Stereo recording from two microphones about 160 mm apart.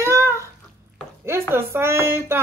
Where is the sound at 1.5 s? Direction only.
15° right (ahead or behind).